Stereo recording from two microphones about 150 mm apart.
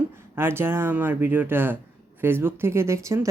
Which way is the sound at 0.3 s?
15° right (ahead or behind).